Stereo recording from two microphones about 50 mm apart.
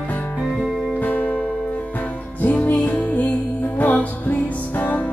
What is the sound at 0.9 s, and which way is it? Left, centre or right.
Music, left.